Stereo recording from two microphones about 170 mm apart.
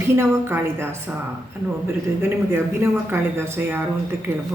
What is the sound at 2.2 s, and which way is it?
Speech, 15° right (ahead or behind).